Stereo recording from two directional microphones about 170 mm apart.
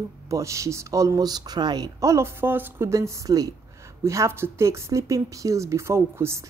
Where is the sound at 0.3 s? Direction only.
20° right (ahead or behind).